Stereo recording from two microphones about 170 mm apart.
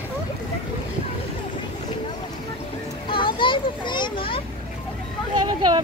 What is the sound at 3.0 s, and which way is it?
Children playing, 30° left (ahead or behind).